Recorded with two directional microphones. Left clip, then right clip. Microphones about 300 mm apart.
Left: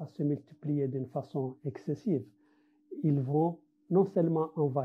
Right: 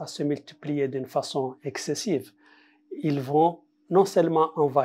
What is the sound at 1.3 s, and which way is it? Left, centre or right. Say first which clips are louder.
Speech: right 8 dB; centre.